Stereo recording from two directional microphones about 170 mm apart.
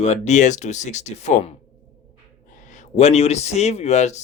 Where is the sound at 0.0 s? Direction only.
40° left (ahead or behind).